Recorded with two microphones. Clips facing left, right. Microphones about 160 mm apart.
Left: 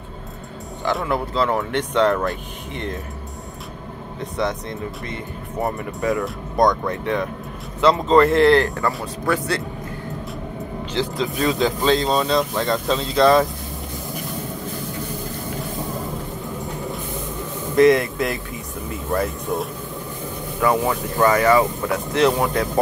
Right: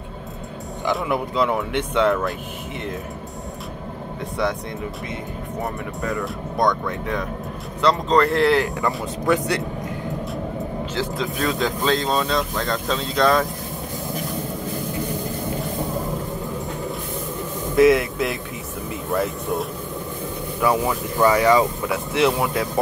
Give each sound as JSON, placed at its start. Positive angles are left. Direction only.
{"t": 1.0, "sound": "speech", "side_deg": -15}
{"t": 4.2, "sound": "speech", "side_deg": 20}
{"t": 5.9, "sound": "speech", "side_deg": 0}
{"t": 8.8, "sound": "speech", "side_deg": -20}
{"t": 11.0, "sound": "speech", "side_deg": 0}
{"t": 17.7, "sound": "speech", "side_deg": -5}
{"t": 20.9, "sound": "speech", "side_deg": -10}